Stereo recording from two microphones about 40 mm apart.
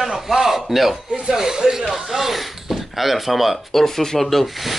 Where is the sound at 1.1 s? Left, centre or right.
Centre.